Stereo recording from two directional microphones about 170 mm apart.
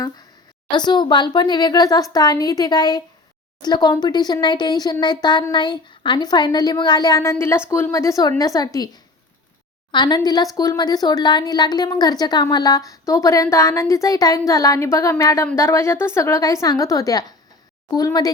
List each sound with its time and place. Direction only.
0.7 s a woman's voice: 25° left (ahead or behind)
9.9 s a woman's voice: 25° left (ahead or behind)